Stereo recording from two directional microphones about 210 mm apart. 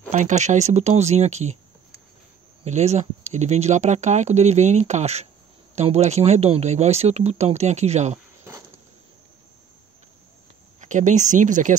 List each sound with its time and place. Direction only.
0.1 s speech: 35° right (ahead or behind)
2.6 s speech: 30° right (ahead or behind)
10.8 s speech: 35° right (ahead or behind)